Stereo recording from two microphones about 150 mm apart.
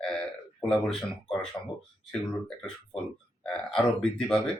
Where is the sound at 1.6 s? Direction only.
30° left (ahead or behind).